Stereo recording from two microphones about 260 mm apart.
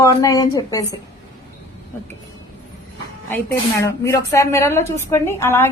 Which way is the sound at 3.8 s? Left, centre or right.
Centre.